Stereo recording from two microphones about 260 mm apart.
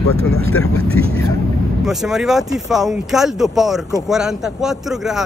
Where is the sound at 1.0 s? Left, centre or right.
Right.